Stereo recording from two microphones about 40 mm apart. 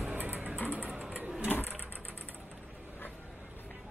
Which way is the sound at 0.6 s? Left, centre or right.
Right.